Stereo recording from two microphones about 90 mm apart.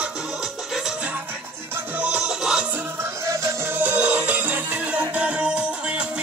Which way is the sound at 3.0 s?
35° right (ahead or behind).